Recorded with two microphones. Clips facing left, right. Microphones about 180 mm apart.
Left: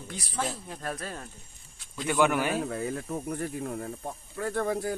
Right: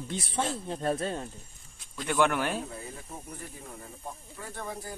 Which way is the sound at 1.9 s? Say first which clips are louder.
Left 2 dB; 5° left (ahead or behind).